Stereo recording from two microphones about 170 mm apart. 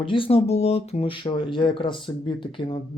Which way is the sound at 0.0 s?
30° left (ahead or behind).